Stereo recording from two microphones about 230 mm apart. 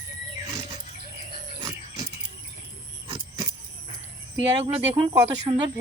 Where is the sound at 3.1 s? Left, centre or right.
Centre.